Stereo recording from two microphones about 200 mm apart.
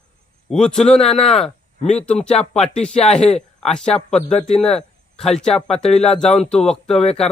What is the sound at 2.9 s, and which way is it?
Speech, 35° left (ahead or behind).